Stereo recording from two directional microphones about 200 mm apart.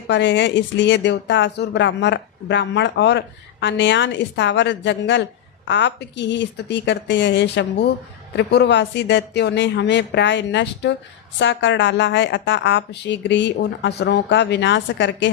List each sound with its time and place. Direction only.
0.1 s speech: 65° left (ahead or behind)